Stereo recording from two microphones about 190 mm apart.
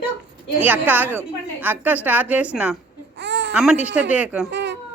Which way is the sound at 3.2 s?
65° right (ahead or behind).